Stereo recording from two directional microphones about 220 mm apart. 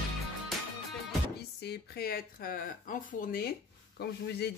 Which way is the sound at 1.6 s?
45° left (ahead or behind).